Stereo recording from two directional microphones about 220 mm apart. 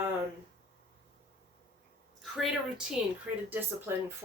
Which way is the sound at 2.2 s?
Centre (ahead or behind).